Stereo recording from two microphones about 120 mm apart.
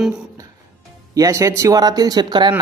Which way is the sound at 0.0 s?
5° right (ahead or behind).